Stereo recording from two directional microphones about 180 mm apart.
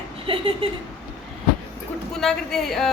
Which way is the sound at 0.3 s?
30° right (ahead or behind).